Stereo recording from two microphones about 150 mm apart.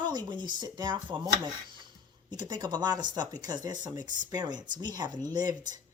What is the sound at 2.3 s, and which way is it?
Speech, 30° right (ahead or behind).